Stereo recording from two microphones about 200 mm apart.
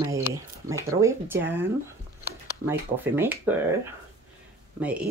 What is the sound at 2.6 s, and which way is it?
Speech, 10° right (ahead or behind).